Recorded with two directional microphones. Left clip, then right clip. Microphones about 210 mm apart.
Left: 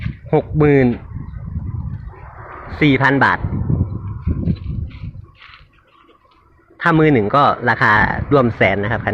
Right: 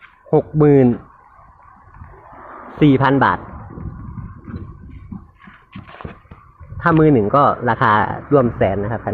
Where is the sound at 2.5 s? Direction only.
55° left (ahead or behind).